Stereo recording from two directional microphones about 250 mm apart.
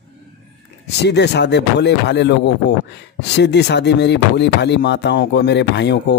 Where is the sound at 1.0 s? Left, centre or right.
Left.